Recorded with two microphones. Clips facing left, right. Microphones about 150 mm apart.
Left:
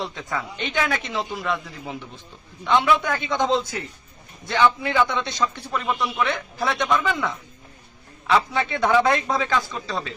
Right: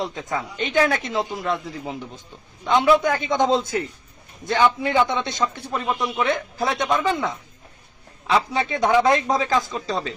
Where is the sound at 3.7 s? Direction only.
30° right (ahead or behind).